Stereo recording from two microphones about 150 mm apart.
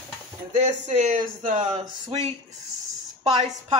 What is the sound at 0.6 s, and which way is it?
Speech, 50° right (ahead or behind).